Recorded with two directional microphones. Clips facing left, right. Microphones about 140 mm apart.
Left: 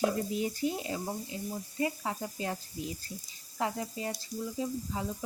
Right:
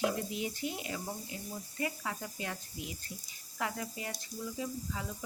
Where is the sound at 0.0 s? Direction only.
40° left (ahead or behind).